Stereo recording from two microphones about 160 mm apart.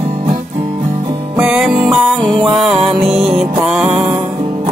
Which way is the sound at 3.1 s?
35° right (ahead or behind).